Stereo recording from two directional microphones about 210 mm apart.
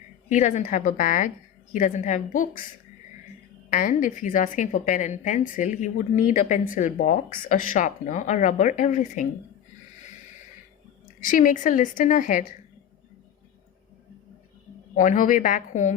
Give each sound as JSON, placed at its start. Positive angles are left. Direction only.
{"t": 0.3, "sound": "a woman's voice", "side_deg": 35}
{"t": 3.7, "sound": "a woman's voice", "side_deg": 40}
{"t": 11.2, "sound": "a woman's voice", "side_deg": 40}
{"t": 14.9, "sound": "a woman's voice", "side_deg": 40}